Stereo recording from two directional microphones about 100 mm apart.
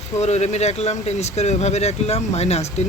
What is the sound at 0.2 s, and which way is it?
Speech, 90° left.